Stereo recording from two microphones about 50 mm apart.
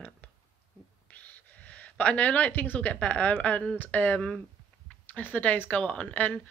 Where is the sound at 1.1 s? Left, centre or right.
Left.